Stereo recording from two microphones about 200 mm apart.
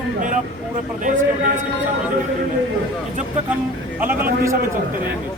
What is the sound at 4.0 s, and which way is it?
Speech, 10° right (ahead or behind).